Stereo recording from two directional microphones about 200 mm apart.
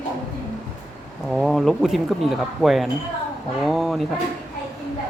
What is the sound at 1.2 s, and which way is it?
Speech, centre (ahead or behind).